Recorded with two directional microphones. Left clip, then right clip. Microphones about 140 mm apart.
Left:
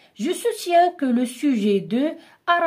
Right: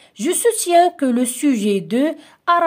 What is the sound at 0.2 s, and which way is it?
Speech, 35° right (ahead or behind).